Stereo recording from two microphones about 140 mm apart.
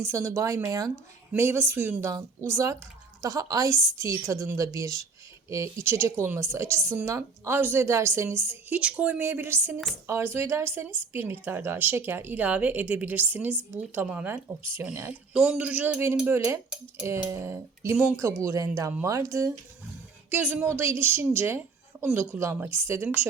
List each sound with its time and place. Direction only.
0.0 s a woman's voice: 20° right (ahead or behind)